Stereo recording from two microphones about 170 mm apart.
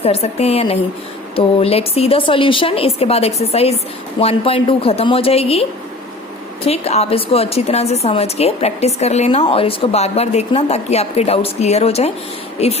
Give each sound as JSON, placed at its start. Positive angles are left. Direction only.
{"t": 0.0, "sound": "a woman's voice", "side_deg": 35}
{"t": 6.7, "sound": "a woman's voice", "side_deg": 40}